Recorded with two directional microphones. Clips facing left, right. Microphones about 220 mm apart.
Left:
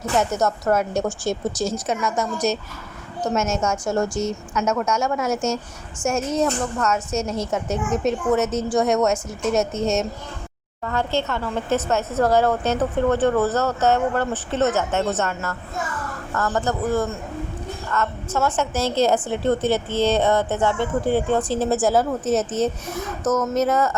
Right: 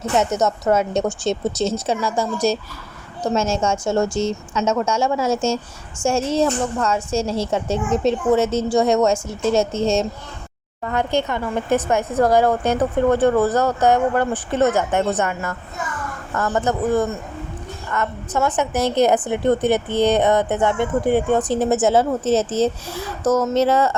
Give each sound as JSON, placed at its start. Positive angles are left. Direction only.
{"t": 0.2, "sound": "a woman's voice", "side_deg": -20}
{"t": 10.8, "sound": "a woman's voice", "side_deg": -15}